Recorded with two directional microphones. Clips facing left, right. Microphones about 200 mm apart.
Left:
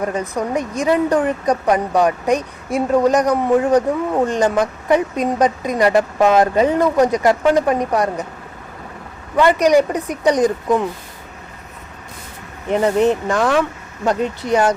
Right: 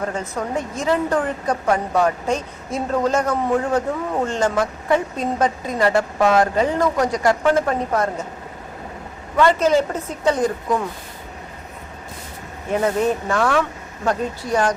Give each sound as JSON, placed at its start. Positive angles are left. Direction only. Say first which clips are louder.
{"t": 0.1, "sound": "a woman's voice", "louder": "left 4 dB", "side_deg": 15}
{"t": 9.4, "sound": "a woman's voice", "louder": "left 3 dB", "side_deg": 15}
{"t": 12.8, "sound": "a woman's voice", "louder": "left 5 dB", "side_deg": 15}